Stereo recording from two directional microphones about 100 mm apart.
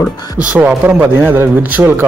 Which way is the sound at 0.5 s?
10° right (ahead or behind).